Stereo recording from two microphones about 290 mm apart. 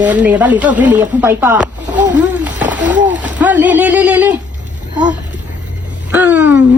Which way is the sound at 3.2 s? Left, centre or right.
Centre.